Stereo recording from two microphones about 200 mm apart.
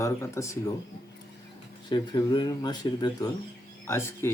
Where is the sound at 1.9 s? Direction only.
20° left (ahead or behind).